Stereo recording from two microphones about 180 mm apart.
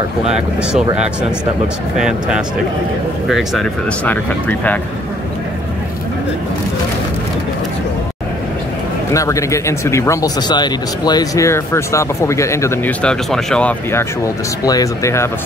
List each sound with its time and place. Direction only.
2.0 s speech: 5° right (ahead or behind)
9.1 s speech: 15° left (ahead or behind)